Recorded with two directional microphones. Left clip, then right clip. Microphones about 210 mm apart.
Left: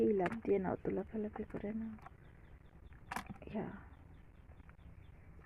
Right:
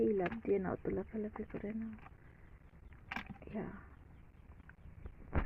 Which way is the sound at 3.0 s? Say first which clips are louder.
Even; 25° left (ahead or behind).